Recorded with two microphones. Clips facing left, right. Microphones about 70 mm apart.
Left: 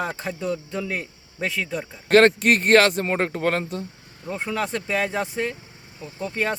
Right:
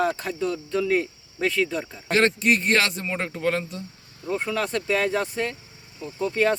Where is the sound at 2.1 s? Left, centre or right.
Left.